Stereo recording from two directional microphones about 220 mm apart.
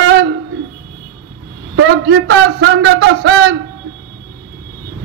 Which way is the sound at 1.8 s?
50° right (ahead or behind).